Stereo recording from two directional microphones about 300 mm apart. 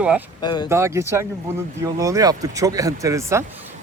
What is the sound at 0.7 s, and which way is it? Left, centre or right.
Speech, centre.